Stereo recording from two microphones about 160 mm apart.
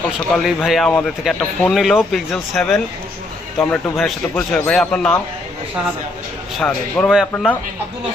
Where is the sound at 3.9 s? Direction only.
Centre (ahead or behind).